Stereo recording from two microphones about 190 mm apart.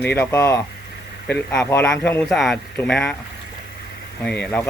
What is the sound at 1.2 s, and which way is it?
Speech, 5° left (ahead or behind).